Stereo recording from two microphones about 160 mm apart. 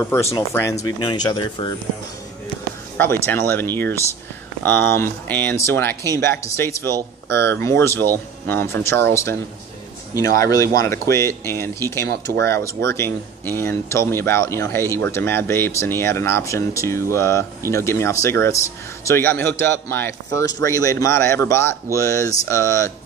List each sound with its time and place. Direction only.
0.0 s speech: 15° left (ahead or behind)
1.0 s speech: 30° left (ahead or behind)
3.0 s speech: 15° left (ahead or behind)
10.4 s speech: 20° left (ahead or behind)
12.1 s speech: 85° right
12.4 s speech: 15° left (ahead or behind)